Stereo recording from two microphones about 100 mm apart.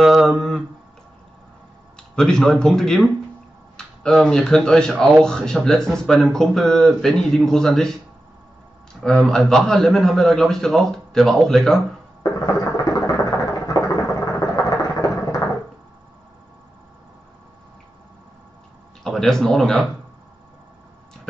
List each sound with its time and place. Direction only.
0.0 s mantra: centre (ahead or behind)
2.1 s a man's voice: 5° left (ahead or behind)
9.0 s a man's voice: 10° left (ahead or behind)
12.2 s a sound: 35° left (ahead or behind)
19.0 s speech: 5° left (ahead or behind)